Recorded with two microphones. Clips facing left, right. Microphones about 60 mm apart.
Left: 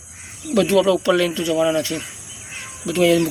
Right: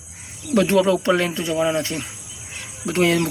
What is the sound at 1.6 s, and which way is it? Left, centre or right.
Speech, centre.